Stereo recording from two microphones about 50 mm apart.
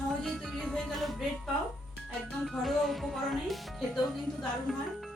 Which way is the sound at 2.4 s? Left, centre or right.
Centre.